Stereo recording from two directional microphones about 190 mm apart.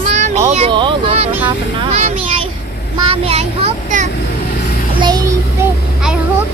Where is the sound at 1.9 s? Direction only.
40° right (ahead or behind).